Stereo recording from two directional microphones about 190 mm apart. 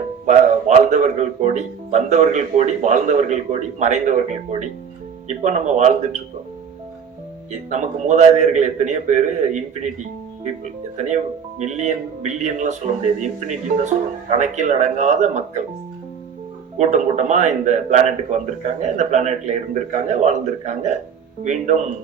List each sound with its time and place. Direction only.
0.3 s speech: 40° right (ahead or behind)
7.7 s speech: 40° right (ahead or behind)
16.7 s speech: 40° right (ahead or behind)